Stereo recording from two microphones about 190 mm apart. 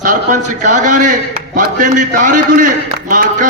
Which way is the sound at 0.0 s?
40° right (ahead or behind).